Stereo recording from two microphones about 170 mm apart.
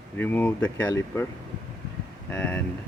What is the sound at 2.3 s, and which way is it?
Speech, 10° left (ahead or behind).